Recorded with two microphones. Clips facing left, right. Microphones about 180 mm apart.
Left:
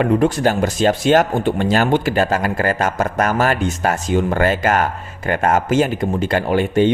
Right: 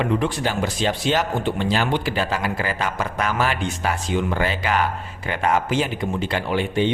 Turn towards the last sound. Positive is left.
turn(degrees=45)  # may be behind; listen again after turning